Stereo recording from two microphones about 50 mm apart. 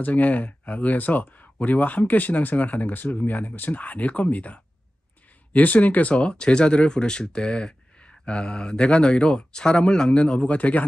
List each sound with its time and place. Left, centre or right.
0.0 s speech: left